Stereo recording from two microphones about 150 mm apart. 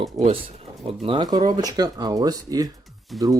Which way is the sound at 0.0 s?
40° right (ahead or behind).